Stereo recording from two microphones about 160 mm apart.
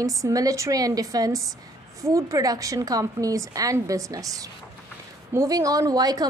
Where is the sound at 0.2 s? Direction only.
20° right (ahead or behind).